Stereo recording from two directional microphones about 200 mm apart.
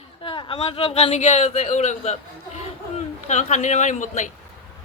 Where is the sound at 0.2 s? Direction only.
25° left (ahead or behind).